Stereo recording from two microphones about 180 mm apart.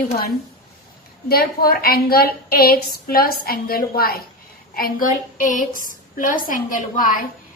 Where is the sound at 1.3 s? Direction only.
60° left (ahead or behind).